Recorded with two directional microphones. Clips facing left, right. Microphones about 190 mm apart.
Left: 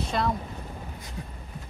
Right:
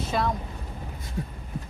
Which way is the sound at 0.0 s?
Centre (ahead or behind).